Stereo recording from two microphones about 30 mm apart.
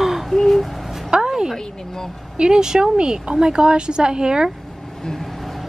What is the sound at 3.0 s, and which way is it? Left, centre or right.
Speech, right.